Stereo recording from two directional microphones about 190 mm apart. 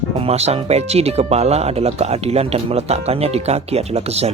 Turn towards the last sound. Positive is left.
turn(degrees=-35)  # may be behind; listen again after turning